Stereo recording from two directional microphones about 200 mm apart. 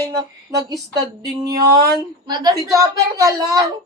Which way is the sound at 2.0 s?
20° right (ahead or behind).